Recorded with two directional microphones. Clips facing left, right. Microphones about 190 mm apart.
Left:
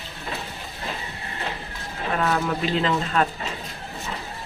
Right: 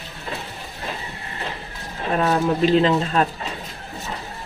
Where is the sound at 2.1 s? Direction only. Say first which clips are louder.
Right 4 dB; 30° right (ahead or behind).